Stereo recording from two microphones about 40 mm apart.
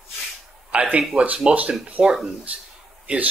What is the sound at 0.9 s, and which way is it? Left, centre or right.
Speech, right.